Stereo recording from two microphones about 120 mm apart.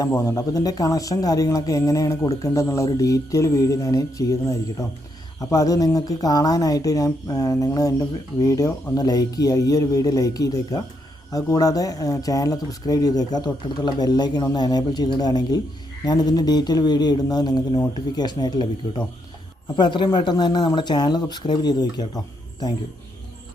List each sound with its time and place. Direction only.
0.1 s speech: 25° left (ahead or behind)
5.4 s speech: 30° left (ahead or behind)